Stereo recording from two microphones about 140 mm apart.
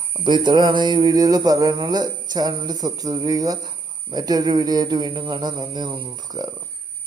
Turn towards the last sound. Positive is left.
turn(degrees=-25)  # may be behind; listen again after turning